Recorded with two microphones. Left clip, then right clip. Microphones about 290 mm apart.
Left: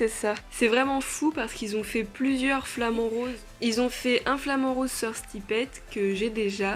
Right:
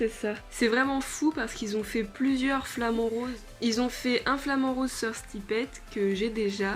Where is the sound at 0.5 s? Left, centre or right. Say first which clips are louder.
Left 2 dB; centre.